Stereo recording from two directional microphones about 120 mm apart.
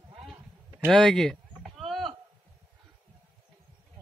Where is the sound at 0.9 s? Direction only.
5° left (ahead or behind).